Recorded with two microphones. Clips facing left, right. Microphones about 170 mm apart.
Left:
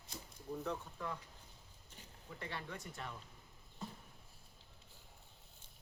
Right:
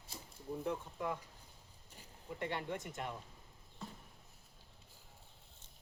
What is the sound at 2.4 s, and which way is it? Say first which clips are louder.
Speech: right 6 dB; 20° right (ahead or behind).